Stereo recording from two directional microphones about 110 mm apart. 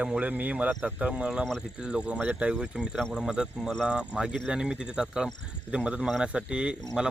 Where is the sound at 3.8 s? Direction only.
10° right (ahead or behind).